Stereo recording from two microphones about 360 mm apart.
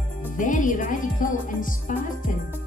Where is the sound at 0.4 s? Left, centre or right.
Left.